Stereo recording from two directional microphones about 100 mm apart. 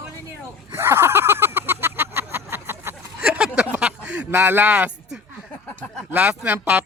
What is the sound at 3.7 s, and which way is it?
Speech, 10° right (ahead or behind).